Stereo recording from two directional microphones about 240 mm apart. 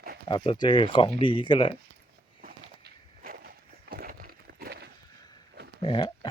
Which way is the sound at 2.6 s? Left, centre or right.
Right.